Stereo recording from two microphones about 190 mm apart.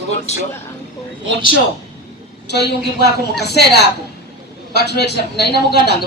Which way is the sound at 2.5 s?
60° left (ahead or behind).